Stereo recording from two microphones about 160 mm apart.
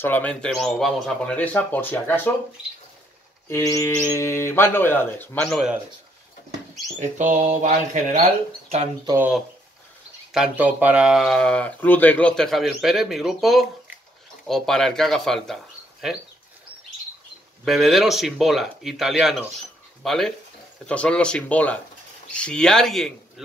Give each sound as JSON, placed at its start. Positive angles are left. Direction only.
{"t": 0.0, "sound": "speech", "side_deg": 10}
{"t": 3.4, "sound": "speech", "side_deg": 20}
{"t": 7.0, "sound": "speech", "side_deg": -50}
{"t": 10.3, "sound": "speech", "side_deg": -5}
{"t": 17.6, "sound": "speech", "side_deg": 0}